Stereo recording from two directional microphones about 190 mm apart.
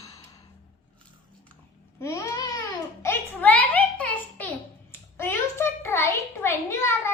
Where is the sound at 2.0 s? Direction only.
15° left (ahead or behind).